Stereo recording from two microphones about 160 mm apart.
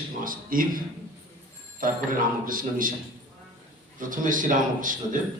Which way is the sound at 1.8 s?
60° right (ahead or behind).